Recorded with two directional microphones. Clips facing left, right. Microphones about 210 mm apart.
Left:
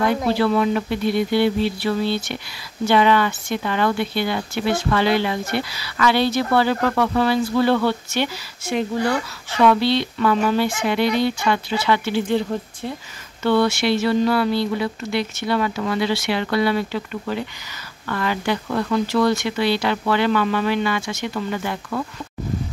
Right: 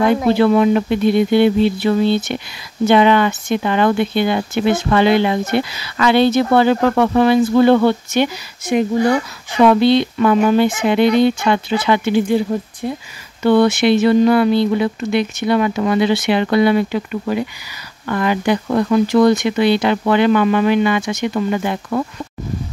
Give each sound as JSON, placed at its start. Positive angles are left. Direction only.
{"t": 0.1, "sound": "speech", "side_deg": -20}